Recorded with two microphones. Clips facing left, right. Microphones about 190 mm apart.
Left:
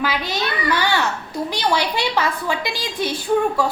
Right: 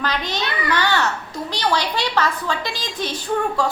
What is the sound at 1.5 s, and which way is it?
A woman's voice, 10° left (ahead or behind).